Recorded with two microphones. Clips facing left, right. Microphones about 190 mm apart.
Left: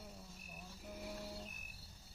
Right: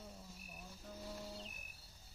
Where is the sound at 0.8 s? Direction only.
15° left (ahead or behind).